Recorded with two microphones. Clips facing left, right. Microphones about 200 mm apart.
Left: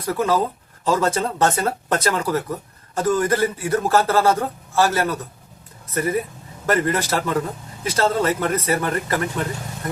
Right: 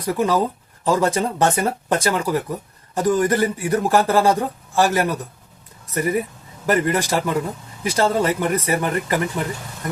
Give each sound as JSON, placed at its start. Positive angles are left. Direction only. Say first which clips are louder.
{"t": 0.0, "sound": "speech", "louder": "right 1 dB", "side_deg": -15}